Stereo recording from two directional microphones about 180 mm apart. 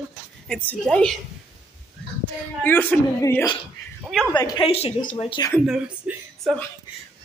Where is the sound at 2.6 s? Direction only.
10° left (ahead or behind).